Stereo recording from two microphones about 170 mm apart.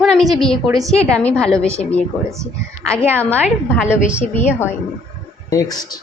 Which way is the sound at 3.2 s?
10° left (ahead or behind).